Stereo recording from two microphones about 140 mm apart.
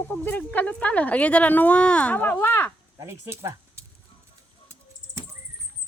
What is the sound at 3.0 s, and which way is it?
Speech, 20° right (ahead or behind).